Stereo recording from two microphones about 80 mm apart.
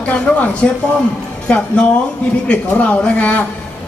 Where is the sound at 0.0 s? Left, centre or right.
Centre.